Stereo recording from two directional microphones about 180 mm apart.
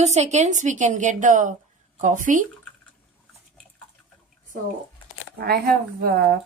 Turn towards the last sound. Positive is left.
turn(degrees=-55)  # may be behind; listen again after turning